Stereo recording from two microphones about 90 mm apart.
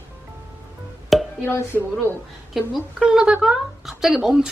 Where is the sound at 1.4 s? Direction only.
25° left (ahead or behind).